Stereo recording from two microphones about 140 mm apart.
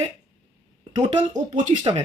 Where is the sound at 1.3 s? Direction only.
60° right (ahead or behind).